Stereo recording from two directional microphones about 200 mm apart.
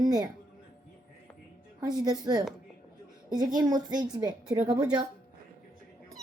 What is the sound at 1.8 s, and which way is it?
A woman's voice, 20° right (ahead or behind).